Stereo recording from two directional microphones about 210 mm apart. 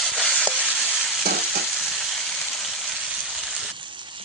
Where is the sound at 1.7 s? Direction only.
Centre (ahead or behind).